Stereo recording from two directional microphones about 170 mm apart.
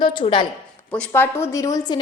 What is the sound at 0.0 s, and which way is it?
Speech, 30° left (ahead or behind).